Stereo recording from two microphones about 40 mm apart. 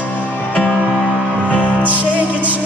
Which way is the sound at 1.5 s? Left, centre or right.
Left.